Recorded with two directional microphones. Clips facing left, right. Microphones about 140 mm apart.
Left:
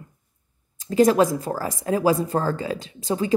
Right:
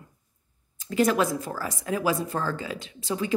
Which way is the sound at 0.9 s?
35° left (ahead or behind).